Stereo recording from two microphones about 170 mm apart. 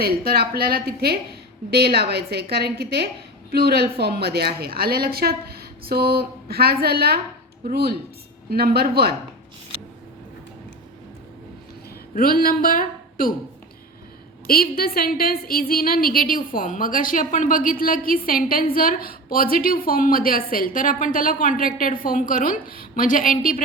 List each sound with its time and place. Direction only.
0.0 s a woman's voice: 65° right (ahead or behind)
12.1 s speech: 60° left (ahead or behind)
14.4 s a woman's voice: 60° left (ahead or behind)